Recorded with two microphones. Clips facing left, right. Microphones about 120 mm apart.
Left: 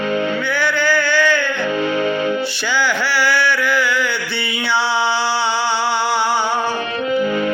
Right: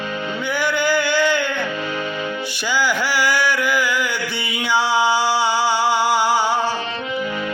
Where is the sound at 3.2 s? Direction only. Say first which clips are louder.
Left 3 dB; 10° right (ahead or behind).